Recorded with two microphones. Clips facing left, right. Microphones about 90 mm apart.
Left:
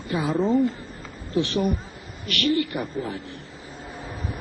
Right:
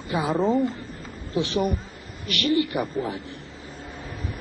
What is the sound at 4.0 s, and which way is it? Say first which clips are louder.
Vehicle: left 2 dB; 20° left (ahead or behind).